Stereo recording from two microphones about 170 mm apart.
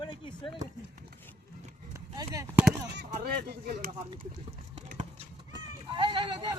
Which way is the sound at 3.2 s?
65° right (ahead or behind).